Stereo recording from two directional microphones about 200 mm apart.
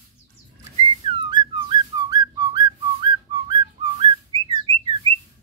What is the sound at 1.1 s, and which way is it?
Whistling, 25° right (ahead or behind).